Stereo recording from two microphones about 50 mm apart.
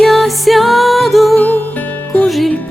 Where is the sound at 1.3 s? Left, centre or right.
Left.